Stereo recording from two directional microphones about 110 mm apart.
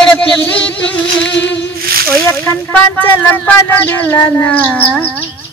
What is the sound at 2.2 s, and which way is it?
Speech, 20° left (ahead or behind).